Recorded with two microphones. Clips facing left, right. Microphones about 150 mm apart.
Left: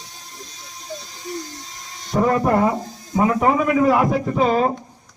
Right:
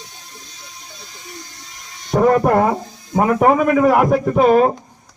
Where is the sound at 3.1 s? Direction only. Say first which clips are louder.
Right 3 dB; 50° right (ahead or behind).